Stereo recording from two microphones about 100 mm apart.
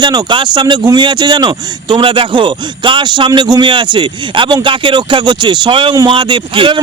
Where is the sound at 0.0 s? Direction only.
45° right (ahead or behind).